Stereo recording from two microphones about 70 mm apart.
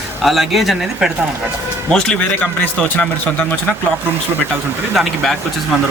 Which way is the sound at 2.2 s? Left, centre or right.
Centre.